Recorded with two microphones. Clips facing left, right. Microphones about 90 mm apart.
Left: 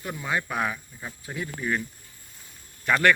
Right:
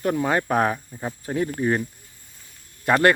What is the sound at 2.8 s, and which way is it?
Speech, 35° right (ahead or behind).